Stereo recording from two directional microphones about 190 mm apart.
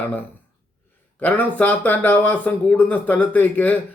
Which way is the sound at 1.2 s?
10° left (ahead or behind).